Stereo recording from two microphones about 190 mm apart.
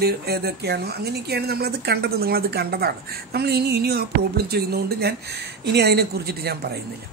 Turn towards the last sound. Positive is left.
turn(degrees=-55)  # may be behind; listen again after turning